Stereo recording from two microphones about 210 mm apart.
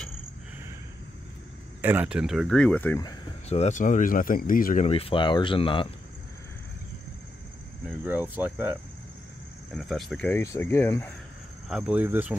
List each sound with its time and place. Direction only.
1.8 s speech: 10° right (ahead or behind); by 3.2 s 15° left (ahead or behind)
3.4 s speech: 30° left (ahead or behind)
8.0 s speech: 10° right (ahead or behind); by 11.1 s 10° left (ahead or behind)
11.7 s speech: 5° right (ahead or behind)